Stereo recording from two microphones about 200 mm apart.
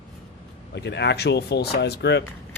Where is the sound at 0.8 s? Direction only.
60° left (ahead or behind).